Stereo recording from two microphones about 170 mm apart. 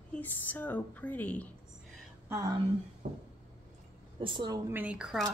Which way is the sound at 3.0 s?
45° right (ahead or behind).